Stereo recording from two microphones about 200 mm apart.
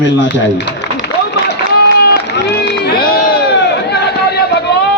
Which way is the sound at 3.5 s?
60° left (ahead or behind).